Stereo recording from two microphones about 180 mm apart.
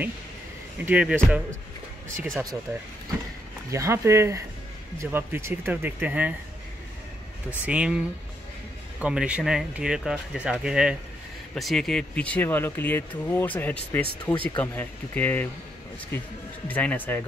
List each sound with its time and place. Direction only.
0.8 s speech: 10° right (ahead or behind)
2.0 s speech: 45° right (ahead or behind)
3.7 s speech: 15° right (ahead or behind)
7.6 s speech: 5° right (ahead or behind)
9.0 s speech: 5° right (ahead or behind); by 17.2 s 10° left (ahead or behind)